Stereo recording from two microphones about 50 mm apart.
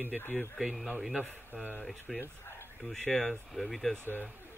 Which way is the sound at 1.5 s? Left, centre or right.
Right.